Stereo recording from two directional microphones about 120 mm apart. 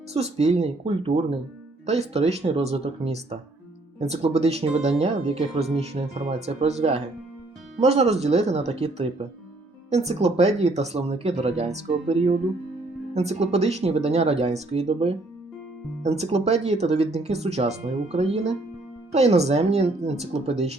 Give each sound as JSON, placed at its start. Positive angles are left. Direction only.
{"t": 0.1, "sound": "speech", "side_deg": -60}